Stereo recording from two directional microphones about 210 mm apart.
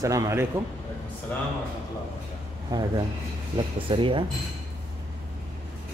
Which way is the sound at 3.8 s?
25° right (ahead or behind).